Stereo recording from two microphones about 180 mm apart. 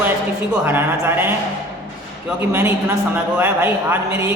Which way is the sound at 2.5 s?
10° right (ahead or behind).